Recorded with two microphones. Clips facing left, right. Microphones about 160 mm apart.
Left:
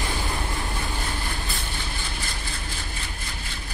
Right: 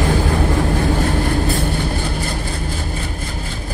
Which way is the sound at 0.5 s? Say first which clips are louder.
Right 13 dB; 55° right (ahead or behind).